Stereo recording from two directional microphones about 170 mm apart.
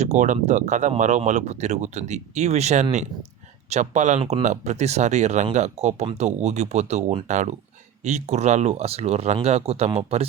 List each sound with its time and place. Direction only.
0.0 s speech: 45° right (ahead or behind)